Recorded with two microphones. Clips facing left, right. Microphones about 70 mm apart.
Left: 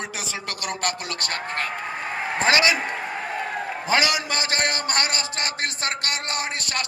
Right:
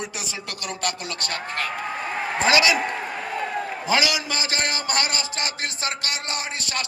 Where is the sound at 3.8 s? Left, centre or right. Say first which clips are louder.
Left 1 dB; left.